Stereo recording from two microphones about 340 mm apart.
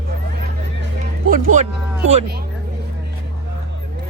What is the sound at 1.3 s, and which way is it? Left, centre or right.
Speech, right.